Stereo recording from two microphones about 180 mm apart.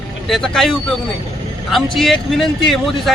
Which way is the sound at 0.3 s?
Centre (ahead or behind).